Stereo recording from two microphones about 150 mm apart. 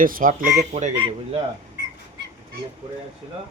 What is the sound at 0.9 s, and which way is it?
Speech, 35° right (ahead or behind).